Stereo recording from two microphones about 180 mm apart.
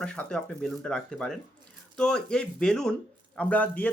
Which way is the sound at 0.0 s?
5° left (ahead or behind).